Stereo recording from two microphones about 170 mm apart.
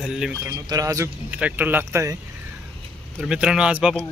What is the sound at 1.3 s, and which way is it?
Speech, 10° right (ahead or behind).